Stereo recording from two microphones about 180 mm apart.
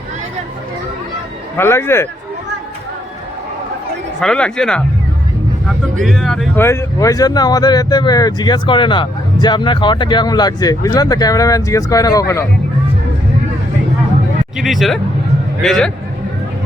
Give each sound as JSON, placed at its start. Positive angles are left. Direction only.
{"t": 1.5, "sound": "speech", "side_deg": 15}
{"t": 4.2, "sound": "speech", "side_deg": 5}
{"t": 6.6, "sound": "speech", "side_deg": 15}
{"t": 14.6, "sound": "speech", "side_deg": 0}